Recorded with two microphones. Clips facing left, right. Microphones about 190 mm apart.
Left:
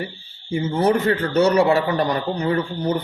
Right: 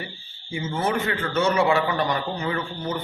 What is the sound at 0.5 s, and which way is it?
A man's voice, 40° left (ahead or behind).